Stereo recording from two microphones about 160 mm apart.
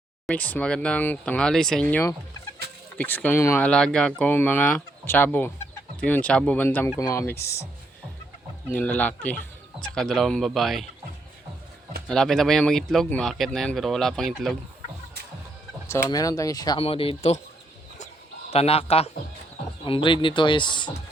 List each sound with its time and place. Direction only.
0.3 s speech: 10° left (ahead or behind)
8.6 s speech: 10° left (ahead or behind)
12.0 s speech: 5° left (ahead or behind)
15.9 s speech: 20° left (ahead or behind)
16.8 s speech: 35° left (ahead or behind)
18.5 s speech: 40° left (ahead or behind)